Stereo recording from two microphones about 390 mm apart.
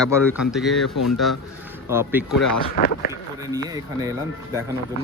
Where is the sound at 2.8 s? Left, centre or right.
Left.